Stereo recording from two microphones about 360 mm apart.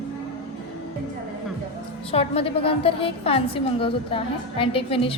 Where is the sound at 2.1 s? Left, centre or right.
Centre.